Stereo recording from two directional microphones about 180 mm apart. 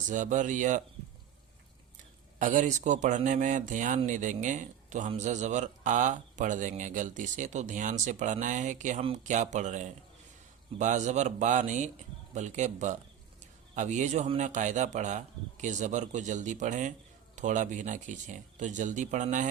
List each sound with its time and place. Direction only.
0.1 s speech: 45° right (ahead or behind)
2.4 s speech: 45° right (ahead or behind)